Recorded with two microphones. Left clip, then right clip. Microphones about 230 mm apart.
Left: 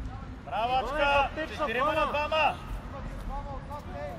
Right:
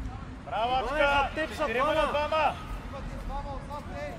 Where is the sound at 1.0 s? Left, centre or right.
Left.